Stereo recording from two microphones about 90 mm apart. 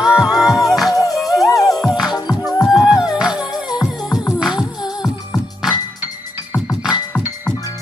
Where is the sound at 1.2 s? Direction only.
Centre (ahead or behind).